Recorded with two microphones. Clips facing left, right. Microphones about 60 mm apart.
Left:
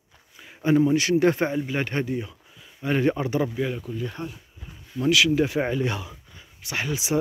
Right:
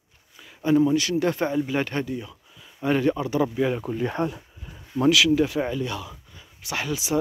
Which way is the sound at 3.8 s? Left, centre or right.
Right.